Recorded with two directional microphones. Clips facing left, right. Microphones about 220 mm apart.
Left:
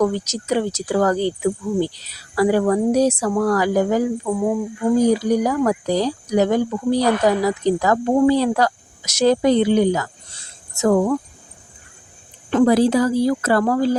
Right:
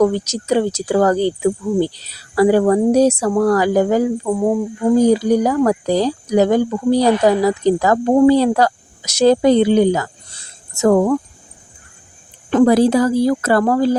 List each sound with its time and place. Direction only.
0.0 s speech: 30° right (ahead or behind)
10.8 s speech: 50° right (ahead or behind)
12.5 s speech: 45° right (ahead or behind)